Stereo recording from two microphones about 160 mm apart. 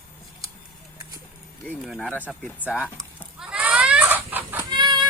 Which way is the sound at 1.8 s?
Centre (ahead or behind).